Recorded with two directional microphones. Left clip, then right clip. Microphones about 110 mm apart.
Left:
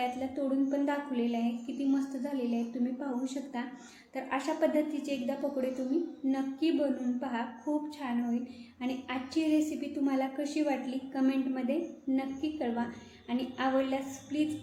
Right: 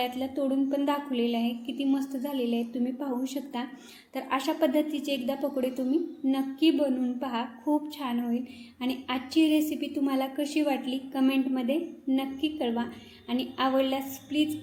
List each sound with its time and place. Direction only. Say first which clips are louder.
0.0 s a woman's voice: right 3 dB; 40° right (ahead or behind)
8.8 s a woman's voice: right 4 dB; 40° right (ahead or behind)